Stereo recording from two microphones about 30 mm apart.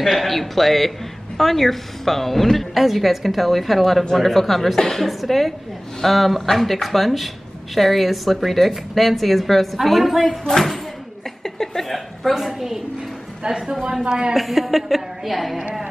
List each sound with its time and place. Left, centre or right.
0.0 s a woman's voice: centre
5.0 s a woman's voice: centre
11.4 s a sound: centre
11.9 s a sound: centre
13.5 s speech: right
14.3 s a woman's voice: centre